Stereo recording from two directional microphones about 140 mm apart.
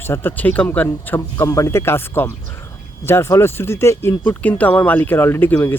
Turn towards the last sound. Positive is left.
turn(degrees=15)  # may be behind; listen again after turning